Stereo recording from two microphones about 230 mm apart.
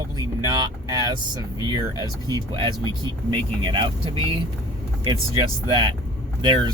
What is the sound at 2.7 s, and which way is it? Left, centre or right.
Speech, centre.